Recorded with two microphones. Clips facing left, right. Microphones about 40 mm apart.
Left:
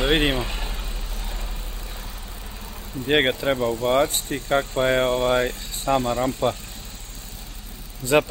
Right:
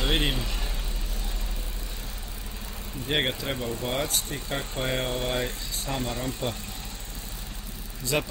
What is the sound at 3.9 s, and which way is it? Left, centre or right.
Speech, left.